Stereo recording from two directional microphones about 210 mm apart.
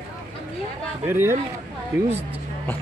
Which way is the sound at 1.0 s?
10° right (ahead or behind).